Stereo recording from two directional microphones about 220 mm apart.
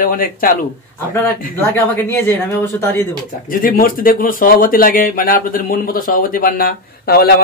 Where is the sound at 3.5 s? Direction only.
40° left (ahead or behind).